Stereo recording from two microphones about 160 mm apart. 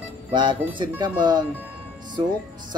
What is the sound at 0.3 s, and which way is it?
Speech, 30° right (ahead or behind).